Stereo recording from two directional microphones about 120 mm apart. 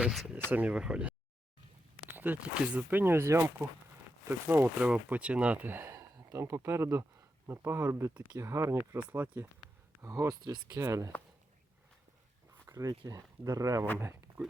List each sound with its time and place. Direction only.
0.0 s speech: 5° right (ahead or behind)
10.0 s speech: 25° right (ahead or behind)
12.6 s a sound: 30° right (ahead or behind)
13.1 s speech: 30° right (ahead or behind)